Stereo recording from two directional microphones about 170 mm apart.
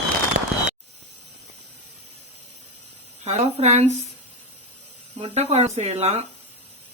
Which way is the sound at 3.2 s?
40° right (ahead or behind).